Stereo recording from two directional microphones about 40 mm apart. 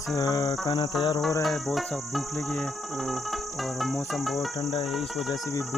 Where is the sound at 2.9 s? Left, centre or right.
Centre.